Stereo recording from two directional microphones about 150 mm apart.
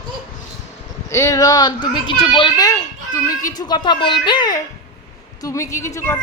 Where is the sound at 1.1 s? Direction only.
20° left (ahead or behind).